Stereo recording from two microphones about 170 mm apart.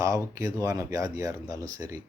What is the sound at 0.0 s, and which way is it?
A man's voice, 20° right (ahead or behind).